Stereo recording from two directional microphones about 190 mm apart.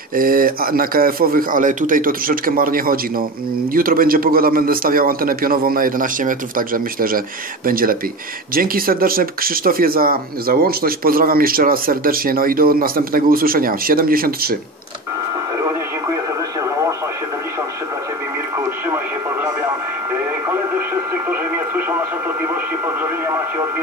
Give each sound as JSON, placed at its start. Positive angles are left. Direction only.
{"t": 0.1, "sound": "speech", "side_deg": -50}
{"t": 20.4, "sound": "radio", "side_deg": -10}